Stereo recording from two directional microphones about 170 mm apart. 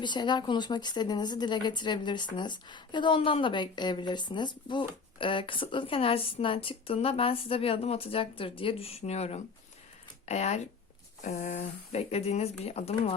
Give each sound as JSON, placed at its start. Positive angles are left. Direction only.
{"t": 0.0, "sound": "speech", "side_deg": 25}